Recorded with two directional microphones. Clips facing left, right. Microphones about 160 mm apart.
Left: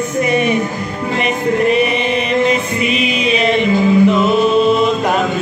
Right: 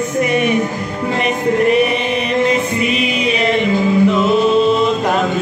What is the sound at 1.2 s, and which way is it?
Chant, 20° left (ahead or behind).